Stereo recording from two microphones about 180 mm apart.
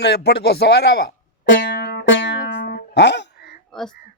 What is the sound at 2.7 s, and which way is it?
Music, 70° left (ahead or behind).